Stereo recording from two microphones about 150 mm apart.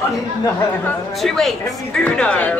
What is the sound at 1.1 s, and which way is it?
Speech, centre (ahead or behind).